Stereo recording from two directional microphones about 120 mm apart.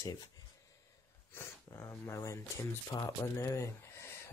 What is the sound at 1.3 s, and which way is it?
Speech, 20° left (ahead or behind).